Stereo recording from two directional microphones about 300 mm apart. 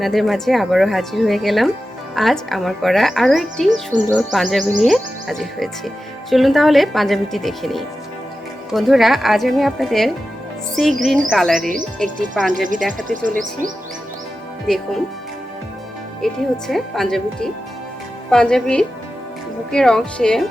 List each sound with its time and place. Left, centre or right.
0.0 s speech: centre
3.7 s speech: right
4.1 s speech: centre
13.1 s speech: right
14.7 s speech: centre
16.2 s speech: centre